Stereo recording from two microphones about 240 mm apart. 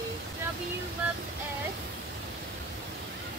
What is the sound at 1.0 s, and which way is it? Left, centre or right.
Female singing, centre.